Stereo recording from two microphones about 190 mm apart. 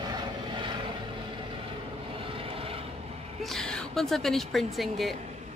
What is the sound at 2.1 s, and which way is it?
Vehicle, 30° right (ahead or behind).